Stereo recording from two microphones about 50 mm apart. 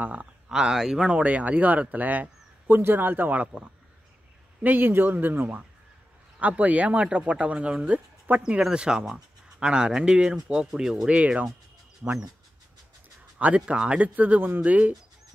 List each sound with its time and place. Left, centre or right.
0.0 s speech: right
0.7 s speech: centre; by 2.2 s right
2.8 s speech: right
4.6 s speech: right
6.4 s speech: right
8.5 s speech: centre
11.1 s speech: right
13.6 s speech: right